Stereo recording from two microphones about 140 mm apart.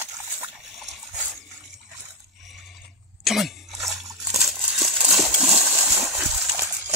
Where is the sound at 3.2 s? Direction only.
Centre (ahead or behind).